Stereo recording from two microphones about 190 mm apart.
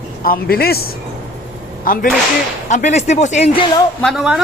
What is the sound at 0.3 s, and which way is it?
A man's voice, 55° left (ahead or behind).